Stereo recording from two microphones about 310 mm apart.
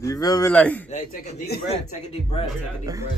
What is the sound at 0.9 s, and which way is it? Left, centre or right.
Speech, left.